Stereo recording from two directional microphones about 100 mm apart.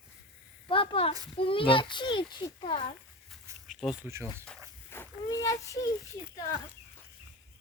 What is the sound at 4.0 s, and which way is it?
Speech, 25° right (ahead or behind).